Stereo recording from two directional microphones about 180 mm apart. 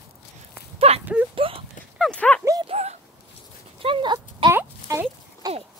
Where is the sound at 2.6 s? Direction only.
35° right (ahead or behind).